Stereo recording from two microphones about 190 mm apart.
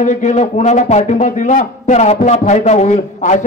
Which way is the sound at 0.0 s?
40° left (ahead or behind).